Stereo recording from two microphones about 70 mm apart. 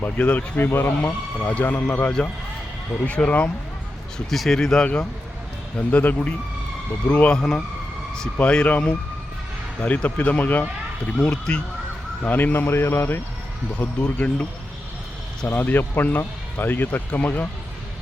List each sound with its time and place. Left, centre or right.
0.2 s speech: left
4.3 s speech: centre
5.9 s speech: left
7.3 s speech: centre
9.8 s speech: left
11.2 s speech: centre; by 13.1 s left
13.7 s speech: centre
15.4 s speech: left